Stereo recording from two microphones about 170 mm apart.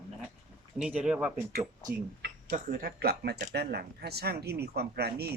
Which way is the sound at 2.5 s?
55° right (ahead or behind).